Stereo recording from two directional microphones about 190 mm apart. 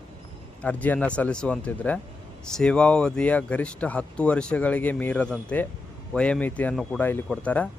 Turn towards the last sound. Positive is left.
turn(degrees=5)  # may be behind; listen again after turning